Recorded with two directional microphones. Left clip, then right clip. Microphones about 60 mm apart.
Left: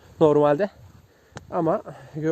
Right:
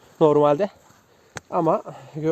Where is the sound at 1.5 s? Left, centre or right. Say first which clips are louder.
Right 3 dB; left.